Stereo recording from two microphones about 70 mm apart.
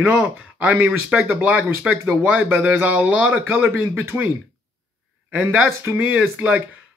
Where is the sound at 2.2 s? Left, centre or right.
Right.